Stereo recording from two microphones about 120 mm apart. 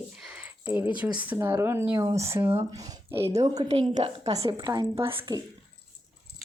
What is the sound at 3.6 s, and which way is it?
Speech, 50° right (ahead or behind).